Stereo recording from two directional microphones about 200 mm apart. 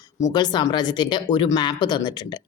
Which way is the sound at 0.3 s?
20° left (ahead or behind).